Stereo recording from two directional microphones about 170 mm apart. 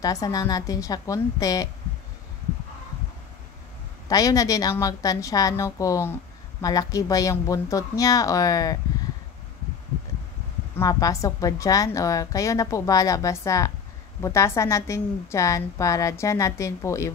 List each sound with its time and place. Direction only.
0.0 s a woman's voice: 20° left (ahead or behind)
4.1 s a woman's voice: 20° left (ahead or behind)
10.8 s a woman's voice: 20° left (ahead or behind)